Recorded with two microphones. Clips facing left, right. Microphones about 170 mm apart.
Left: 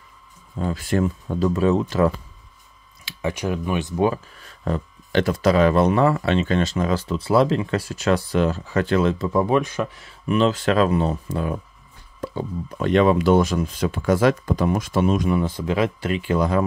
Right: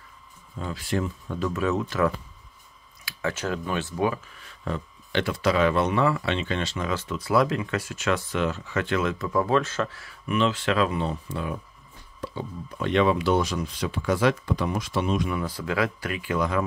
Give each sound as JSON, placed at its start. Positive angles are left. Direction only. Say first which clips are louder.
{"t": 0.6, "sound": "speech", "louder": "left 6 dB", "side_deg": 45}
{"t": 1.3, "sound": "speech", "louder": "left 6 dB", "side_deg": 30}
{"t": 3.1, "sound": "speech", "louder": "left 4 dB", "side_deg": 15}
{"t": 4.0, "sound": "speech", "louder": "left 6 dB", "side_deg": 35}
{"t": 10.2, "sound": "speech", "louder": "left 5 dB", "side_deg": 35}
{"t": 15.3, "sound": "speech", "louder": "left 5 dB", "side_deg": 25}